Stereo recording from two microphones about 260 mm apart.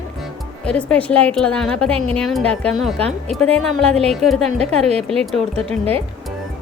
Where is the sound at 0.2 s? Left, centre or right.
Centre.